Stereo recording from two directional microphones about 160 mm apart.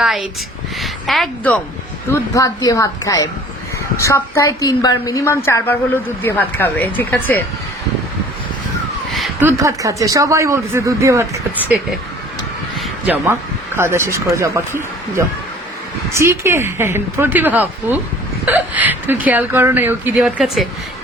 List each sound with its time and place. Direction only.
0.0 s a woman's voice: 5° right (ahead or behind)
2.1 s a woman's voice: 20° left (ahead or behind)
9.4 s speech: 15° right (ahead or behind)
13.7 s speech: 15° right (ahead or behind)